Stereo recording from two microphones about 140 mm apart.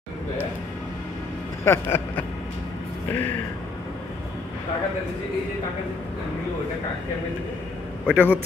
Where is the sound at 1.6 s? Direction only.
15° left (ahead or behind).